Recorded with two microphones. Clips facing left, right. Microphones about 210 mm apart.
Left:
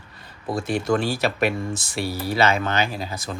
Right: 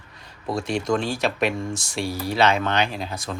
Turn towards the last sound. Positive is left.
turn(degrees=0)  # may be behind; listen again after turning